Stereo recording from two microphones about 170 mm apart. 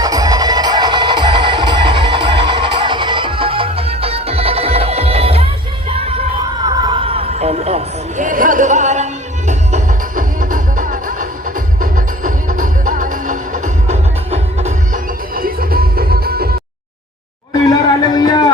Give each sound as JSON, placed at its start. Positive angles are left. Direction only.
{"t": 0.0, "sound": "music", "side_deg": -20}
{"t": 5.9, "sound": "yell", "side_deg": -35}
{"t": 6.7, "sound": "a sound", "side_deg": -25}
{"t": 9.5, "sound": "music", "side_deg": -45}
{"t": 15.4, "sound": "music", "side_deg": -60}
{"t": 17.7, "sound": "a sound", "side_deg": 25}